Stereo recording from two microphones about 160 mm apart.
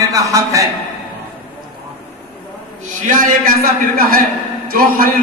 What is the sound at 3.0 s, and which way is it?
A man's voice, 60° right (ahead or behind).